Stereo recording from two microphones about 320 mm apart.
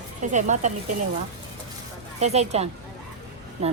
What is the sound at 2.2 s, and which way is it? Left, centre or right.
Speech, centre.